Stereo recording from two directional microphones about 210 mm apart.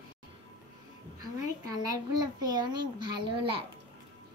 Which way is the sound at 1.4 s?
15° right (ahead or behind).